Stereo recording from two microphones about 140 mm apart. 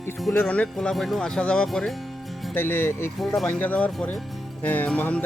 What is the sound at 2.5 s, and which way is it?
Speech, 15° left (ahead or behind).